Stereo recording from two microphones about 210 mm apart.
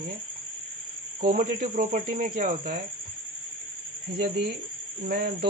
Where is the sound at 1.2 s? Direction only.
40° right (ahead or behind).